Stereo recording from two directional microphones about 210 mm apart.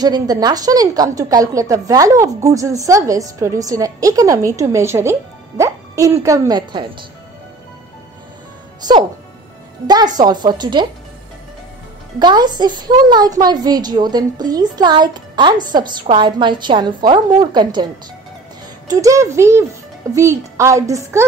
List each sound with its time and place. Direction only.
0.0 s a woman's voice: 20° right (ahead or behind)
9.8 s a woman's voice: 20° right (ahead or behind)
12.2 s a woman's voice: 20° right (ahead or behind)
18.9 s a woman's voice: 15° right (ahead or behind)